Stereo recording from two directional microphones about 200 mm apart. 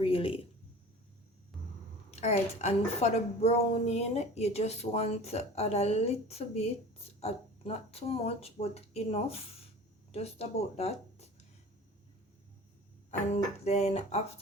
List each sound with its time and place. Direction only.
0.0 s speech: 30° left (ahead or behind)
2.0 s a woman's voice: 35° left (ahead or behind)
13.1 s a woman's voice: 35° left (ahead or behind)